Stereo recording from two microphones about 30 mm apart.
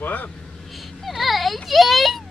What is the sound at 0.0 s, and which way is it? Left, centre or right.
Speech, left.